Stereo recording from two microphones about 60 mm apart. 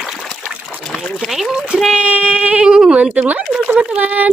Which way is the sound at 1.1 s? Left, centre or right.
Centre.